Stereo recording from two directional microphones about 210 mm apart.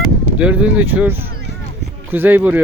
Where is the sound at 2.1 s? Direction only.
10° right (ahead or behind).